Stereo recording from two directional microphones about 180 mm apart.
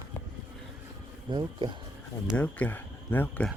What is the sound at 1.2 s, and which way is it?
Speech, 25° right (ahead or behind).